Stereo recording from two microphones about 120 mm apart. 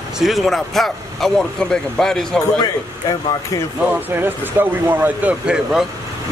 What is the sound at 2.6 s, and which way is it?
Speech, 35° left (ahead or behind).